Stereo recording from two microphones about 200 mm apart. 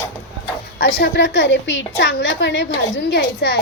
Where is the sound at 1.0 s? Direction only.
60° left (ahead or behind).